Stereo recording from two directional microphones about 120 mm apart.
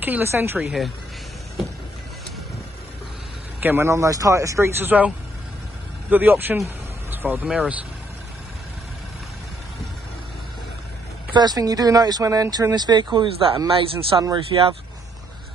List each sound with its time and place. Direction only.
0.0 s a woman's voice: 15° right (ahead or behind)
0.7 s speech: centre (ahead or behind)
3.6 s speech: 20° right (ahead or behind)
11.3 s speech: 35° right (ahead or behind); by 14.8 s 50° right (ahead or behind)